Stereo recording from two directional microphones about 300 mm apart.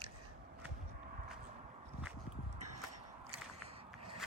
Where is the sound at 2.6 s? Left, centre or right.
Right.